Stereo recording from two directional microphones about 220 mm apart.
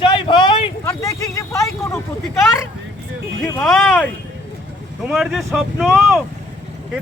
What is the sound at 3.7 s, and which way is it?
Speech, centre (ahead or behind).